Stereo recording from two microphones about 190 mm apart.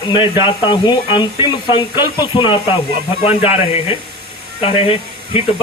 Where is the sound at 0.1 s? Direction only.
25° left (ahead or behind).